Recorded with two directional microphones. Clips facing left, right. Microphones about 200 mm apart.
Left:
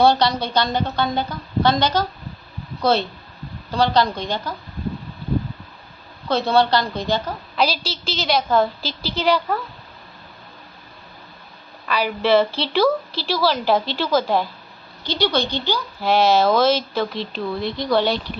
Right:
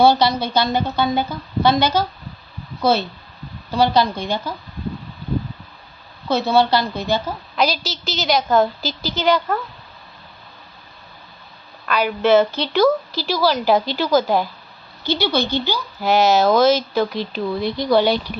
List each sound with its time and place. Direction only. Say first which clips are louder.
0.0 s a woman's voice: right 2 dB; 5° right (ahead or behind)
6.2 s speech: right 1 dB; 5° right (ahead or behind)
7.8 s a woman's voice: even; 30° left (ahead or behind)
8.1 s speech: right 2 dB; centre (ahead or behind)
8.8 s a woman's voice: right 1 dB; 30° left (ahead or behind)
9.2 s speech: right 1 dB; centre (ahead or behind)
11.9 s speech: right 2 dB; centre (ahead or behind)